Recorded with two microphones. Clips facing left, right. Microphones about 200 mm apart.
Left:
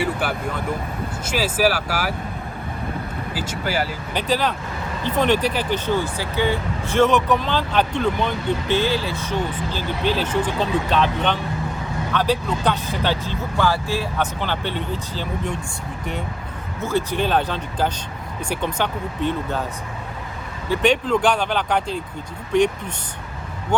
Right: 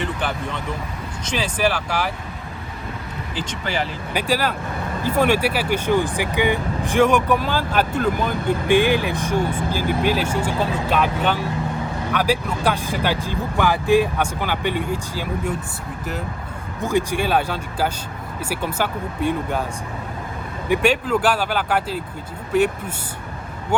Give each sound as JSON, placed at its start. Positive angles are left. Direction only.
{"t": 0.0, "sound": "speech", "side_deg": 5}
{"t": 3.3, "sound": "speech", "side_deg": 5}
{"t": 4.1, "sound": "speech", "side_deg": -10}
{"t": 9.5, "sound": "speech", "side_deg": -50}
{"t": 9.7, "sound": "speech", "side_deg": -10}
{"t": 16.8, "sound": "speech", "side_deg": -15}
{"t": 20.7, "sound": "speech", "side_deg": -5}